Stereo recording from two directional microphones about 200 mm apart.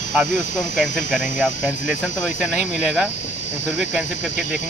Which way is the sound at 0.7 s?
Centre (ahead or behind).